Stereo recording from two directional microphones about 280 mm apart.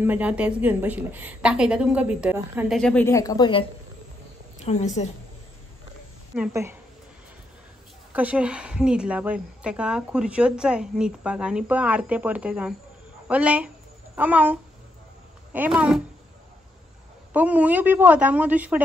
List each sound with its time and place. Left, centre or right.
0.0 s speech: centre
4.6 s a woman's voice: left
6.3 s a woman's voice: centre
8.1 s speech: centre
17.3 s speech: centre